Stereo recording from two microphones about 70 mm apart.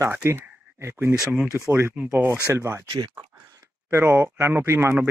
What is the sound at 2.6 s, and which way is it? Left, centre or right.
Speech, right.